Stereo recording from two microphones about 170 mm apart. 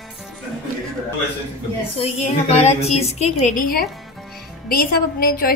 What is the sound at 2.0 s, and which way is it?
A woman's voice, 40° left (ahead or behind).